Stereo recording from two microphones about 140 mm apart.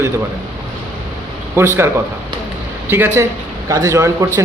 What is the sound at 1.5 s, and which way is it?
Speech, 20° right (ahead or behind).